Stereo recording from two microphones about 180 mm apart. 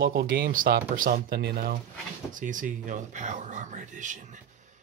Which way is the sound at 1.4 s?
60° right (ahead or behind).